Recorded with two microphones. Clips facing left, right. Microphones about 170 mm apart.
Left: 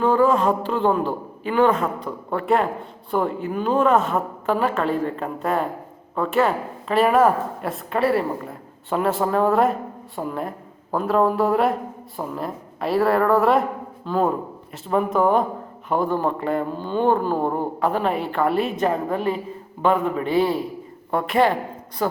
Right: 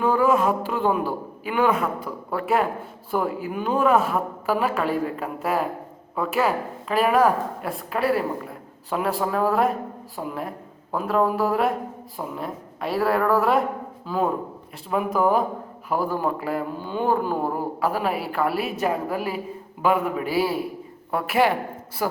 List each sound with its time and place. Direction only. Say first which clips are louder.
0.0 s a man's voice: left 2 dB; 10° right (ahead or behind)